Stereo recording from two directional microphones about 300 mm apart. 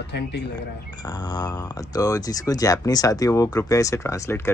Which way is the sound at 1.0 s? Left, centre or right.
Centre.